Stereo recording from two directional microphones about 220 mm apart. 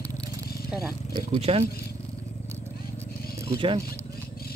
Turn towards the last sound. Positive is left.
turn(degrees=-20)  # may be behind; listen again after turning